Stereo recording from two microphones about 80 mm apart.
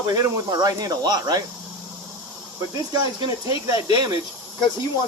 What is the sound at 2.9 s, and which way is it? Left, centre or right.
Speech, right.